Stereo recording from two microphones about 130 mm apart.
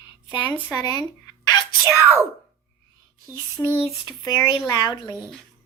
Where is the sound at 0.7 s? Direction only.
30° left (ahead or behind).